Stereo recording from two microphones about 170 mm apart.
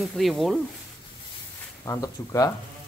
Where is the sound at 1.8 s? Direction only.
20° left (ahead or behind).